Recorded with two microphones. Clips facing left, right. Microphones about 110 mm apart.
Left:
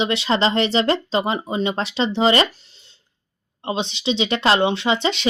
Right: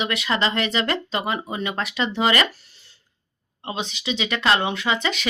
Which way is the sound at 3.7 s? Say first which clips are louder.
Left 5 dB; 30° left (ahead or behind).